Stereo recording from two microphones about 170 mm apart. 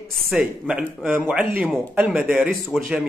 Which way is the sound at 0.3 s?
5° right (ahead or behind).